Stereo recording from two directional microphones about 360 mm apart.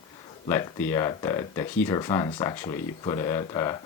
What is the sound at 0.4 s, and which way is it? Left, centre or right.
Speech, centre.